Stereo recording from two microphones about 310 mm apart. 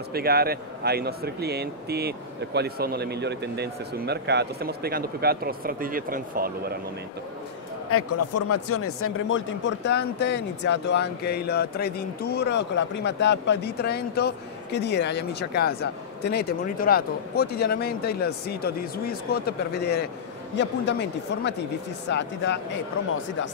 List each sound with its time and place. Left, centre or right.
0.1 s speech: right
7.9 s speech: left